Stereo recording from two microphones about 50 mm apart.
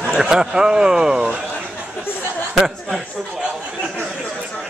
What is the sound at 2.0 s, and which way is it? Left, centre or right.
Speech, left.